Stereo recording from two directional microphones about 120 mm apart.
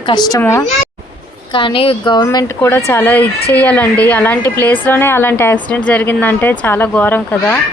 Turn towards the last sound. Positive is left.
turn(degrees=15)  # may be behind; listen again after turning